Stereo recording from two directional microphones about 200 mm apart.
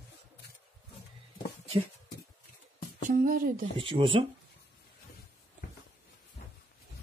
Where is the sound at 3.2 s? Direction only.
45° right (ahead or behind).